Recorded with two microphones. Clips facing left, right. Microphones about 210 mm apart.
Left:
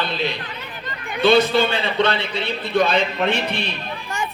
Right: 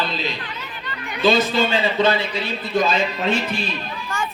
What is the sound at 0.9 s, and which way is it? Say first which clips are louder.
Chatter: left 2 dB; 50° left (ahead or behind).